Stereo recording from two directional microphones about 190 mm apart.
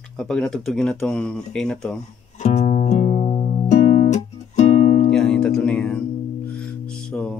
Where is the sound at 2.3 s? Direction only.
35° left (ahead or behind).